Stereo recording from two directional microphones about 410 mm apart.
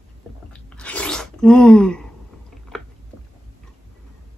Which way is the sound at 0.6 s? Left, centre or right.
Centre.